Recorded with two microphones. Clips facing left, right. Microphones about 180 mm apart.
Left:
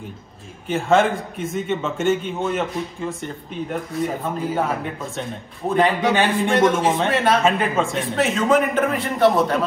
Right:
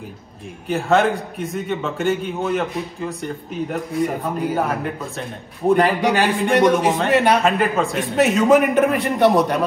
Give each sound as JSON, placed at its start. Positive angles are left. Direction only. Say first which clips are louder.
{"t": 0.7, "sound": "a man's voice", "louder": "even", "side_deg": 0}